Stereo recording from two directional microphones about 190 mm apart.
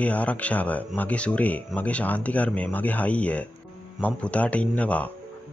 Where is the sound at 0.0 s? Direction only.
5° left (ahead or behind).